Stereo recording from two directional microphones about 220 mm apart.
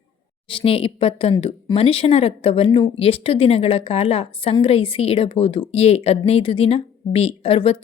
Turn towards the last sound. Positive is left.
turn(degrees=25)  # may be behind; listen again after turning